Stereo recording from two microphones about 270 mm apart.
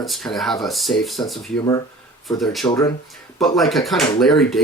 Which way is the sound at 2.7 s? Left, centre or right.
Centre.